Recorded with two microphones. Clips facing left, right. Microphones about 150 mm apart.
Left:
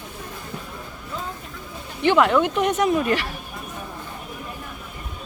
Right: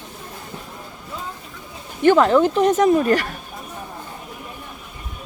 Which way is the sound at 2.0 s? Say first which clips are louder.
Right 4 dB; 40° right (ahead or behind).